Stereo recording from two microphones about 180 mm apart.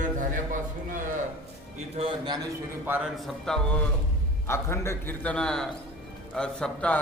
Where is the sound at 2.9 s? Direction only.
5° right (ahead or behind).